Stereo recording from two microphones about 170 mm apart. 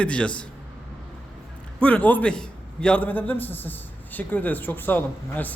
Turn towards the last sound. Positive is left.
turn(degrees=10)  # may be behind; listen again after turning